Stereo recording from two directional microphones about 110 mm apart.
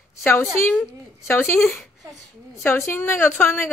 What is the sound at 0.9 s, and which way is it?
A woman's voice, 25° left (ahead or behind).